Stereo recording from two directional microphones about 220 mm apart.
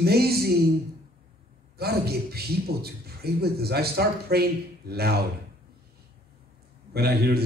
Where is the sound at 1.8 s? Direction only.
45° right (ahead or behind).